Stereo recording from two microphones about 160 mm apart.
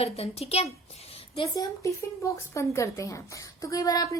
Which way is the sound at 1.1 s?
35° left (ahead or behind).